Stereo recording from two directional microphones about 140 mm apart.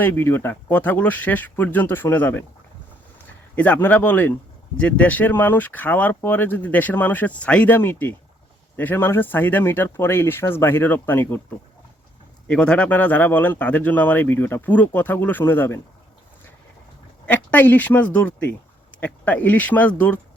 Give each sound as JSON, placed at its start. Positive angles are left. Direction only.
{"t": 0.0, "sound": "speech", "side_deg": 15}
{"t": 3.5, "sound": "speech", "side_deg": 10}
{"t": 12.5, "sound": "speech", "side_deg": 5}
{"t": 17.2, "sound": "speech", "side_deg": 15}